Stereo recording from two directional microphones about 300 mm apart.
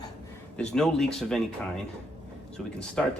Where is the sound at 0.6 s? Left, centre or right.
Centre.